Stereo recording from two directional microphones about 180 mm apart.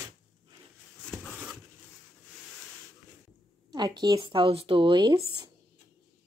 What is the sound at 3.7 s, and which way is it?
Speech, 25° right (ahead or behind).